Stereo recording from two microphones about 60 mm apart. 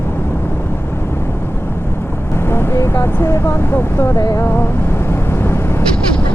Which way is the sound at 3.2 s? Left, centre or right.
Left.